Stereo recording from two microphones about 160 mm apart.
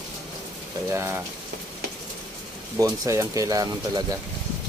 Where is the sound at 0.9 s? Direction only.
15° right (ahead or behind).